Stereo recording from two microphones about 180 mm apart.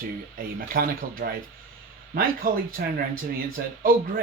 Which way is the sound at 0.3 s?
55° right (ahead or behind).